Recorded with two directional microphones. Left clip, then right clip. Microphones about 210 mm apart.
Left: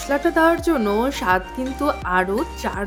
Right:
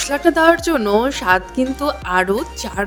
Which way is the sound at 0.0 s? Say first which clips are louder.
Right 4 dB; 40° right (ahead or behind).